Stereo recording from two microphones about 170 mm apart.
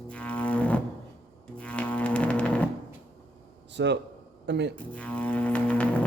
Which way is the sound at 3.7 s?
90° right.